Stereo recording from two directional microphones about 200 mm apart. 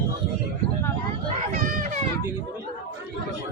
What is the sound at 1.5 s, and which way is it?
Children playing, 40° right (ahead or behind).